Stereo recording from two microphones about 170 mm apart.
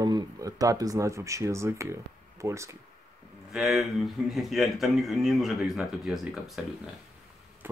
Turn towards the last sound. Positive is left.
turn(degrees=0)  # may be behind; listen again after turning